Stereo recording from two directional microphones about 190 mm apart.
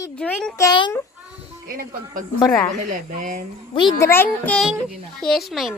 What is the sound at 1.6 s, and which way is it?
Speech, 50° right (ahead or behind).